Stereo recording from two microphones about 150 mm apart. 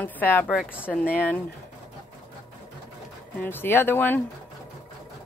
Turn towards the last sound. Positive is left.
turn(degrees=15)  # may be behind; listen again after turning